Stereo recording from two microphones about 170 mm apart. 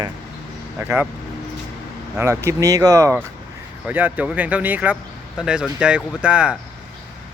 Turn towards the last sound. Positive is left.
turn(degrees=-5)  # may be behind; listen again after turning